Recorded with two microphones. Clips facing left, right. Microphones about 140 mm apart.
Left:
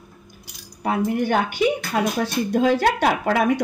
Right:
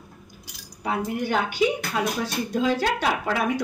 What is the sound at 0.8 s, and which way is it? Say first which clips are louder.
Speech: left 5 dB; 55° left (ahead or behind).